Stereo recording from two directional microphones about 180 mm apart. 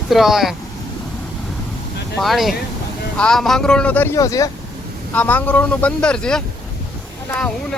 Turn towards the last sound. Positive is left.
turn(degrees=5)  # may be behind; listen again after turning